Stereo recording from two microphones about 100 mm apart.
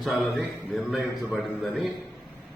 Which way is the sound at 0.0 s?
Centre (ahead or behind).